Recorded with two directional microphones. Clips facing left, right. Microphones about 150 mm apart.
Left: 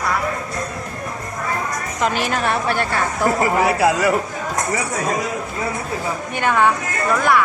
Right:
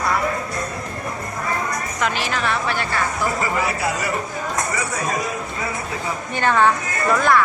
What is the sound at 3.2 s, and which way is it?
Speech, 75° left (ahead or behind).